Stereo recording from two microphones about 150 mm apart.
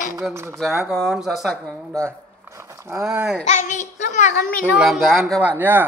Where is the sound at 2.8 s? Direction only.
15° right (ahead or behind).